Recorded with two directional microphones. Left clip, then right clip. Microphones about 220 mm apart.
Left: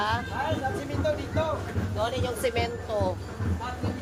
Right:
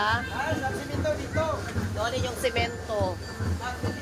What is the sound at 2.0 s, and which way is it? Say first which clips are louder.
Speech: even; centre (ahead or behind).